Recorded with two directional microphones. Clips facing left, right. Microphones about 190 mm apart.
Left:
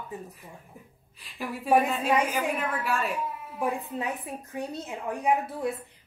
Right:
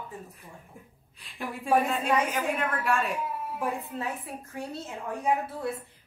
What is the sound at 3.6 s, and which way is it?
A woman's voice, 15° left (ahead or behind).